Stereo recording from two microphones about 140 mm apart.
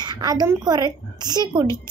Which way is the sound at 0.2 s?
30° right (ahead or behind).